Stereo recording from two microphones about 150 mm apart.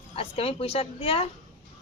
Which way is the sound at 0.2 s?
40° left (ahead or behind).